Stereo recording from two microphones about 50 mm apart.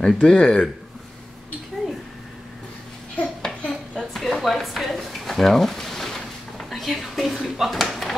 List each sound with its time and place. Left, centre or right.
0.0 s speech: centre
3.4 s dishes: centre
4.3 s a sound: centre
7.4 s speech: centre